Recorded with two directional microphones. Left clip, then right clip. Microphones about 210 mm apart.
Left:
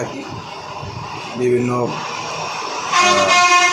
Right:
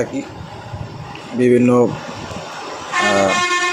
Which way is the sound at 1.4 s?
50° right (ahead or behind).